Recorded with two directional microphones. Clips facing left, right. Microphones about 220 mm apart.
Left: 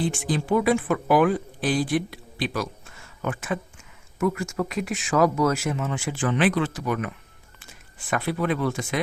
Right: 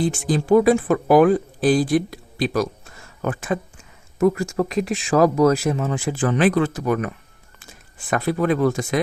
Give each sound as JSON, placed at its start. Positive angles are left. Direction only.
{"t": 0.0, "sound": "speech", "side_deg": -40}
{"t": 8.1, "sound": "speech", "side_deg": -40}